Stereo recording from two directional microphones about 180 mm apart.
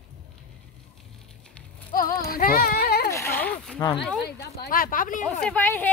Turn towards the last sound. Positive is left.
turn(degrees=10)  # may be behind; listen again after turning